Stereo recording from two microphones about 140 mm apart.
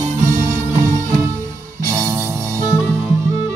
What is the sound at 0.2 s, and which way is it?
Music, 70° right (ahead or behind).